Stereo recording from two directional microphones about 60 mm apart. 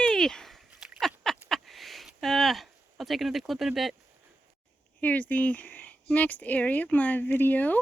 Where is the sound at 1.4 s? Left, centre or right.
Centre.